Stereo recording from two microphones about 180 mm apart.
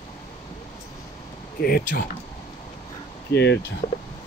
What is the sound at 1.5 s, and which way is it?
Speech, 55° left (ahead or behind).